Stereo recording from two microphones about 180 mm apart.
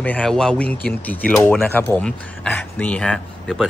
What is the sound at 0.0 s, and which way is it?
Speech, 5° left (ahead or behind).